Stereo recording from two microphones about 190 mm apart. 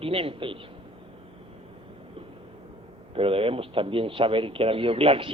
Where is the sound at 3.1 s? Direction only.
30° right (ahead or behind).